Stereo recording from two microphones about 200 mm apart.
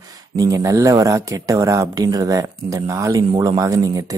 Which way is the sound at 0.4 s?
15° right (ahead or behind).